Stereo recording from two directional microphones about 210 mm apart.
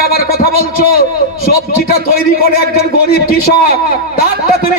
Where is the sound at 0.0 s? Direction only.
45° left (ahead or behind).